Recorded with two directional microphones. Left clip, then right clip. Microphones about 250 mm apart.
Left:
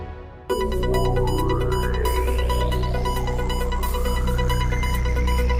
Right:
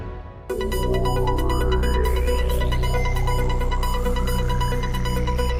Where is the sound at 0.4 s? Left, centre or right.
Centre.